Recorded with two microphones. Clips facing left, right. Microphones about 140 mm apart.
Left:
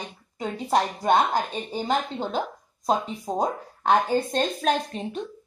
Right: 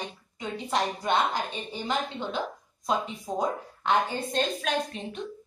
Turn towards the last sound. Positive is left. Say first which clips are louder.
# left 5 dB
turn(degrees=40)  # may be behind; listen again after turning